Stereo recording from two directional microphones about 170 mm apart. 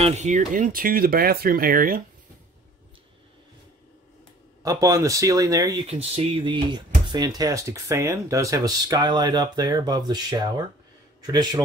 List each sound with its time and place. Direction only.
0.0 s speech: 45° right (ahead or behind)
4.6 s speech: 20° right (ahead or behind)
5.9 s speech: 35° right (ahead or behind)